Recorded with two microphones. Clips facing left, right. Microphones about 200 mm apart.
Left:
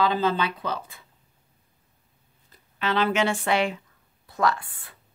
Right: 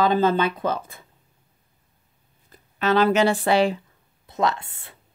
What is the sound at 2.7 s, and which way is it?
Speech, 45° right (ahead or behind).